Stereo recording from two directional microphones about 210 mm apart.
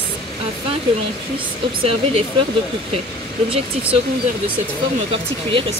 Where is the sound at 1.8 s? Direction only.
25° right (ahead or behind).